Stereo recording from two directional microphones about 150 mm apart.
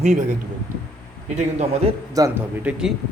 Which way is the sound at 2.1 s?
20° right (ahead or behind).